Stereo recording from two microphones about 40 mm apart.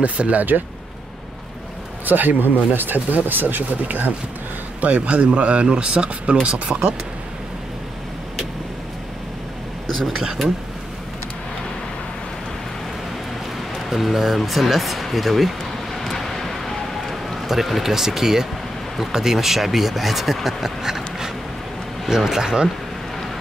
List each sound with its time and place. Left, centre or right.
0.0 s speech: right
2.0 s speech: right
13.8 s speech: centre
16.0 s a sound: centre
18.9 s speech: centre